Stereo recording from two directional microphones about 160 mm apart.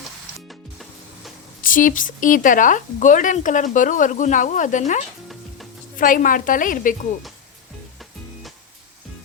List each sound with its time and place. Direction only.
0.4 s music: centre (ahead or behind)
1.6 s a woman's voice: 60° left (ahead or behind)